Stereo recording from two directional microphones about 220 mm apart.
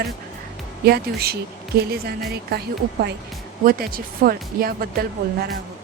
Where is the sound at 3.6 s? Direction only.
40° right (ahead or behind).